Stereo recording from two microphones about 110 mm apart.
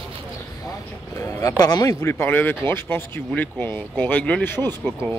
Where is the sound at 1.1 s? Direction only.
25° left (ahead or behind).